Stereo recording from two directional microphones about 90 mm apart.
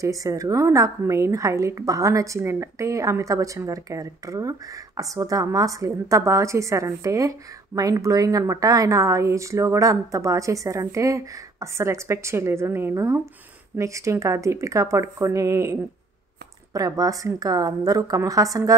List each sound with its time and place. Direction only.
0.0 s a woman's voice: 35° right (ahead or behind)